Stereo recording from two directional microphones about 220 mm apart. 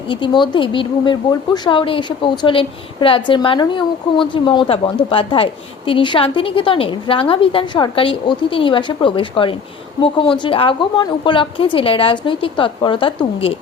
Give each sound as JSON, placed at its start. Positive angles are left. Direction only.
{"t": 0.1, "sound": "a woman's voice", "side_deg": 20}